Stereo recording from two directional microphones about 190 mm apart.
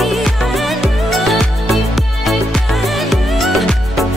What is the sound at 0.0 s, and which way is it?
Music, centre (ahead or behind).